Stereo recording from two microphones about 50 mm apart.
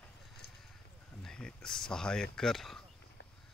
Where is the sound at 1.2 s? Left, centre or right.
Centre.